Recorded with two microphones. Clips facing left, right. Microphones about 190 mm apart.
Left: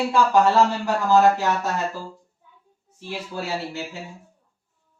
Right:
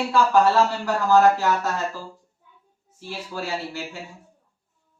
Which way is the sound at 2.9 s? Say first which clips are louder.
Left 1 dB; 20° left (ahead or behind).